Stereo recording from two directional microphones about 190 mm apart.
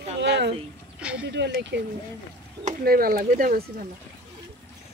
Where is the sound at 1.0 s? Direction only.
5° right (ahead or behind).